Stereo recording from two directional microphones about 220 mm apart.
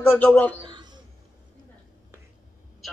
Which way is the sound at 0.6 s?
20° right (ahead or behind).